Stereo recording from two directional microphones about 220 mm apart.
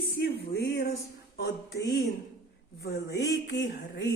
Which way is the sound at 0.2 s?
50° left (ahead or behind).